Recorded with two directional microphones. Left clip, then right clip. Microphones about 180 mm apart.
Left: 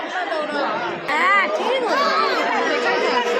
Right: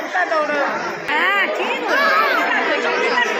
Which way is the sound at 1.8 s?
Centre (ahead or behind).